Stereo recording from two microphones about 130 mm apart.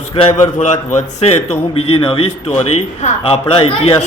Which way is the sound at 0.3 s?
65° left (ahead or behind).